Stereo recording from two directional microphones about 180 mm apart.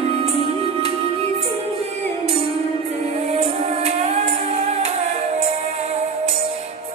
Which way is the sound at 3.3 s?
35° right (ahead or behind).